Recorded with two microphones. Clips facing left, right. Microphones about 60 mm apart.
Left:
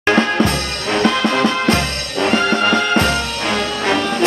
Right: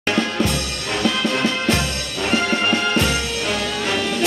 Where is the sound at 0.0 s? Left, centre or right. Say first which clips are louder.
Left 6 dB; left.